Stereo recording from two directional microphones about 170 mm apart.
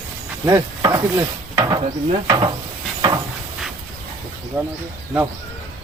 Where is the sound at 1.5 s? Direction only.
25° right (ahead or behind).